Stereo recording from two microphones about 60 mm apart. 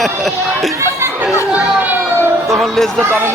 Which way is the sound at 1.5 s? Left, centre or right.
Right.